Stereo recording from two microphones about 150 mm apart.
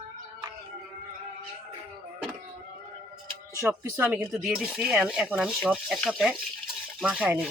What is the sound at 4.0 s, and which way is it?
Speech, 5° right (ahead or behind).